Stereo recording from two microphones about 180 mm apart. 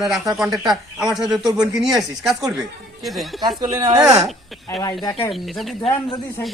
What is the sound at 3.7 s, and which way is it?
Speech, 20° right (ahead or behind).